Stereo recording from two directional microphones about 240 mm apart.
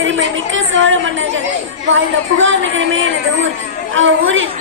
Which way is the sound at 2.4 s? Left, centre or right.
Right.